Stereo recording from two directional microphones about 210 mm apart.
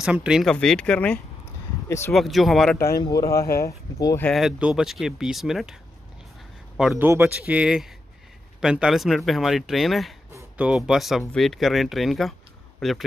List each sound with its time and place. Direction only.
0.0 s speech: 5° right (ahead or behind); by 2.1 s 10° left (ahead or behind)
2.1 s speech: centre (ahead or behind)
3.0 s speech: 20° left (ahead or behind)
4.3 s speech: centre (ahead or behind)
6.8 s speech: 5° right (ahead or behind)